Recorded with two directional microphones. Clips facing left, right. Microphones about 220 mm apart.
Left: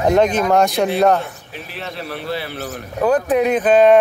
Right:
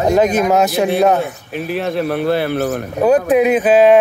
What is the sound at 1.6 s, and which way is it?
Speech, 50° right (ahead or behind).